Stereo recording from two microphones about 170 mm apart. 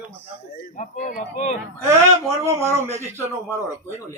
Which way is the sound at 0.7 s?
50° left (ahead or behind).